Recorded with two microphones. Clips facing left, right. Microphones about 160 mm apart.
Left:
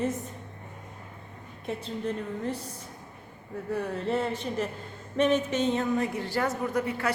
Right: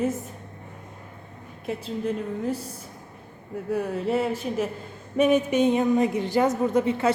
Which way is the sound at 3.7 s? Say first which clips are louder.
Right 4 dB; 10° right (ahead or behind).